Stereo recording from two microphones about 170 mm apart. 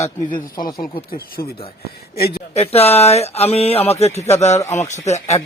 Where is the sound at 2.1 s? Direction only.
65° left (ahead or behind).